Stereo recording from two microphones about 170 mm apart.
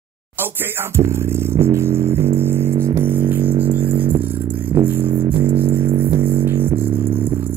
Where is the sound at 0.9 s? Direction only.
15° right (ahead or behind).